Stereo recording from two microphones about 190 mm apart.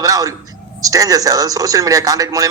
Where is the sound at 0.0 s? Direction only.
20° right (ahead or behind).